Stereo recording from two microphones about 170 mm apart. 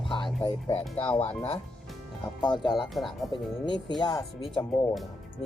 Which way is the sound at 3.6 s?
25° left (ahead or behind).